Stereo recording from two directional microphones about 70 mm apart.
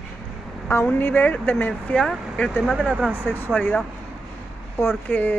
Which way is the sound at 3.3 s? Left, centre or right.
Left.